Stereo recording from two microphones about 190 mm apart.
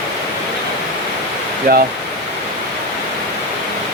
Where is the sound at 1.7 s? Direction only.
55° right (ahead or behind).